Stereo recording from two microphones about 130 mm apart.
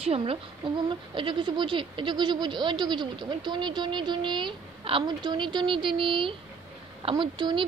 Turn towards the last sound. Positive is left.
turn(degrees=-40)  # may be behind; listen again after turning